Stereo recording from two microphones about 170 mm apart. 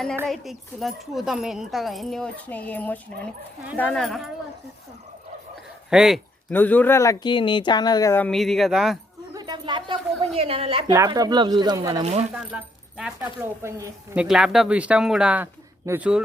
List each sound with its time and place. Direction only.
0.3 s speech: centre (ahead or behind)
5.9 s speech: 5° right (ahead or behind)
6.5 s speech: 10° left (ahead or behind)
8.3 s speech: centre (ahead or behind)
9.3 s a sound: 25° right (ahead or behind)
10.9 s speech: 20° right (ahead or behind)
12.3 s speech: 5° right (ahead or behind)
14.2 s speech: 5° right (ahead or behind)